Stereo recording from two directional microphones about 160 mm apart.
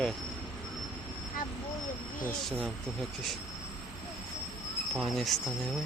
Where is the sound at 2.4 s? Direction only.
5° left (ahead or behind).